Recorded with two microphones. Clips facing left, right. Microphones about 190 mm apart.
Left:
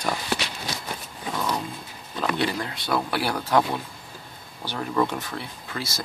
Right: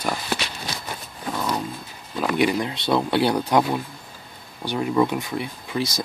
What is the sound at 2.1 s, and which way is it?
Speech, 15° right (ahead or behind).